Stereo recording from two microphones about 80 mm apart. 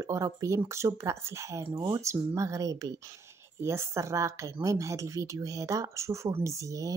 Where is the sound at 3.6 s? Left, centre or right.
Right.